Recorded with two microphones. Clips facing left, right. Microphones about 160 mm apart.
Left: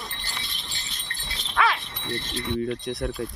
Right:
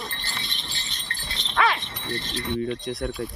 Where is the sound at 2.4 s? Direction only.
Centre (ahead or behind).